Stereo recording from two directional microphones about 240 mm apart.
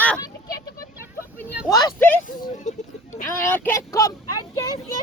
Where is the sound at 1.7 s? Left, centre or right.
Centre.